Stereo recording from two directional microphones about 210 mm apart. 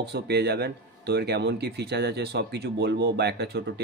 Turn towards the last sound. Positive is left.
turn(degrees=-55)  # may be behind; listen again after turning